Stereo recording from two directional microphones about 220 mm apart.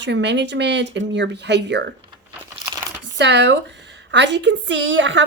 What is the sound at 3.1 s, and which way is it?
A woman's voice, 50° right (ahead or behind).